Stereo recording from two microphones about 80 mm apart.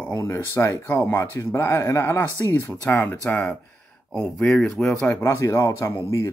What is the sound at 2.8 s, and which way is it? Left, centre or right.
Speech, centre.